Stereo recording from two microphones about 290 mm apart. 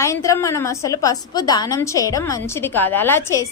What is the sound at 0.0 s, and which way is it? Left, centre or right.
A woman's voice, centre.